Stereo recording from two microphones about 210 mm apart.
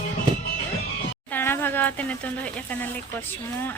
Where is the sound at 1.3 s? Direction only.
10° left (ahead or behind).